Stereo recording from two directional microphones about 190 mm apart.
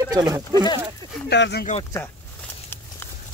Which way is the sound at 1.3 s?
60° left (ahead or behind).